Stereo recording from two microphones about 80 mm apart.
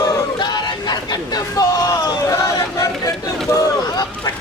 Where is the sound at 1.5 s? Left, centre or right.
Left.